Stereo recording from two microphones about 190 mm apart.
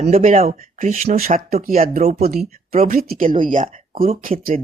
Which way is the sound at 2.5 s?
45° right (ahead or behind).